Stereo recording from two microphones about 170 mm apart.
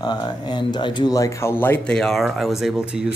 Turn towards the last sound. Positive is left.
turn(degrees=-5)  # may be behind; listen again after turning